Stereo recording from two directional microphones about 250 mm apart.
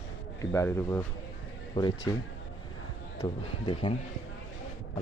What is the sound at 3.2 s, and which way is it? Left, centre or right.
Speech, centre.